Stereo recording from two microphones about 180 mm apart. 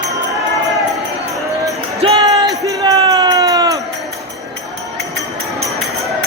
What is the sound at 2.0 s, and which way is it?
Basketball bounce, 30° right (ahead or behind).